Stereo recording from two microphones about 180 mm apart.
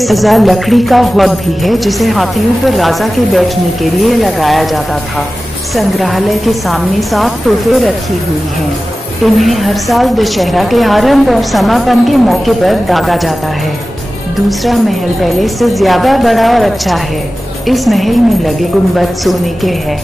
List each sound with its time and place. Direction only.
0.0 s music: centre (ahead or behind)
5.8 s music: centre (ahead or behind)
9.2 s music: centre (ahead or behind)
14.6 s music: centre (ahead or behind)